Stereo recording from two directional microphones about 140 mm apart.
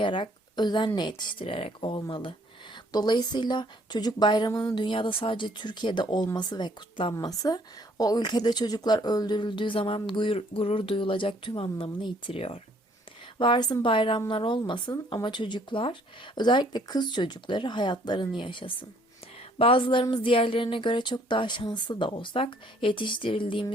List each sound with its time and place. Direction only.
0.0 s a woman's voice: 35° left (ahead or behind)